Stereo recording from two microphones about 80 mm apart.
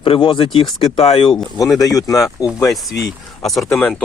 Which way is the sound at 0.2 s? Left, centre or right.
Left.